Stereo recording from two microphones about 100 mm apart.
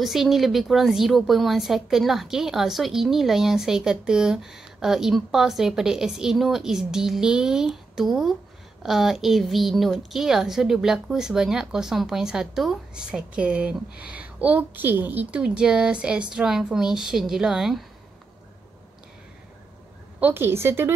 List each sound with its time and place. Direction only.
0.0 s a woman's voice: centre (ahead or behind)
20.2 s a woman's voice: 20° right (ahead or behind)